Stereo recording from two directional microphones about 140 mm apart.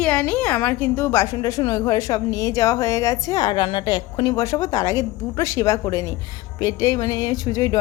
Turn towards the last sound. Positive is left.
turn(degrees=25)  # may be behind; listen again after turning